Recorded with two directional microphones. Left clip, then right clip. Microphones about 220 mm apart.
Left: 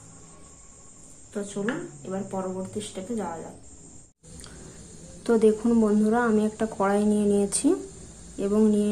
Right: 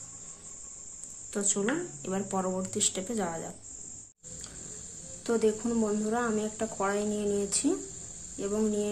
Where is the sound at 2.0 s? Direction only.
50° right (ahead or behind).